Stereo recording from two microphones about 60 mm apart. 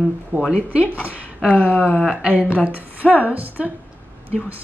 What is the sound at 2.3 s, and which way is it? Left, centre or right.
Speech, right.